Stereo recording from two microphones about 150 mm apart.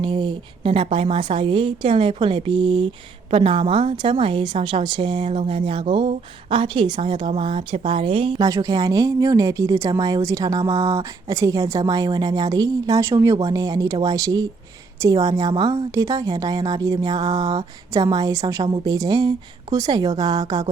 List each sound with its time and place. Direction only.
0.0 s a woman's voice: 35° right (ahead or behind)
8.4 s speech: 25° right (ahead or behind)